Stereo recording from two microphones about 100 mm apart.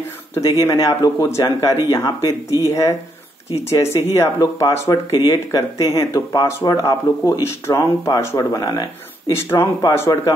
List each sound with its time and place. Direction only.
0.3 s speech: 35° left (ahead or behind)
3.8 s speech: 30° left (ahead or behind)
4.6 s speech: 40° left (ahead or behind)
9.3 s speech: 25° left (ahead or behind)